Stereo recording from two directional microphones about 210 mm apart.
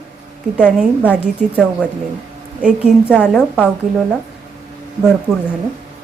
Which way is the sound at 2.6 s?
5° right (ahead or behind).